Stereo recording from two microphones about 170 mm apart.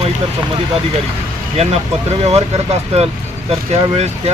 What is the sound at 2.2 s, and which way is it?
Speech, 40° right (ahead or behind).